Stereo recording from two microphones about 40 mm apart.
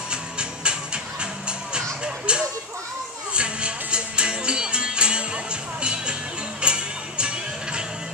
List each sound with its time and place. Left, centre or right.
0.1 s music: right